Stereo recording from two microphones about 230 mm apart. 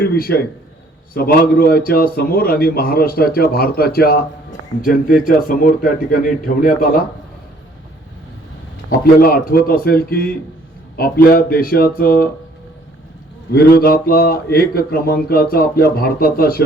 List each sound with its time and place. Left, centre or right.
0.0 s speech: left
8.9 s speech: left
13.5 s speech: left